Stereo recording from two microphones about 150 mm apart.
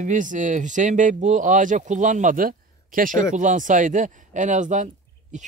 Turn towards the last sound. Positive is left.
turn(degrees=-55)  # may be behind; listen again after turning